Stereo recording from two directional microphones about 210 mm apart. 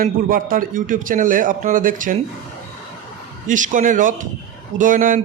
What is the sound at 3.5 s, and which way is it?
A man's voice, 35° right (ahead or behind).